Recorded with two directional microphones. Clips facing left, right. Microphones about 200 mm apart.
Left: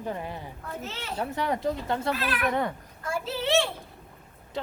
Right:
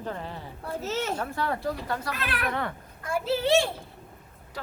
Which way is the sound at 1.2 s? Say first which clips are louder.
Left 2 dB; 15° left (ahead or behind).